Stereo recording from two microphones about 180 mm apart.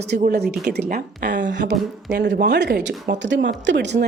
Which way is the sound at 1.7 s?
70° right (ahead or behind).